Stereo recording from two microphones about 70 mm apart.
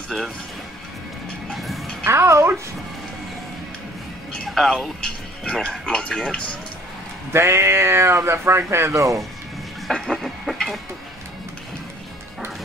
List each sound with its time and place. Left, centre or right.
1.5 s bow-wow: centre
2.0 s speech: right
4.3 s speech: centre
7.3 s speech: right
9.8 s a sound: centre